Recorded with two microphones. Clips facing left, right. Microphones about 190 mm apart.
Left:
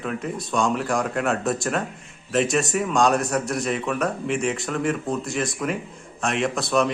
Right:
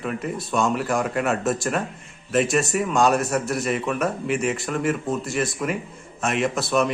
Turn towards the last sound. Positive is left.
turn(degrees=0)  # may be behind; listen again after turning